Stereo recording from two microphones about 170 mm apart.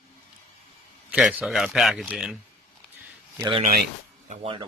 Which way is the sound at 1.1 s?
Centre (ahead or behind).